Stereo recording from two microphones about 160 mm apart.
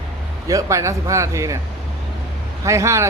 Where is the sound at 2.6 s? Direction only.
20° right (ahead or behind).